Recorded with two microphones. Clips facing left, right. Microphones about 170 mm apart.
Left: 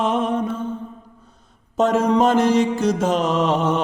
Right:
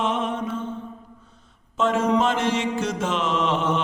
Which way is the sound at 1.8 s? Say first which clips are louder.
Left 4 dB; 40° left (ahead or behind).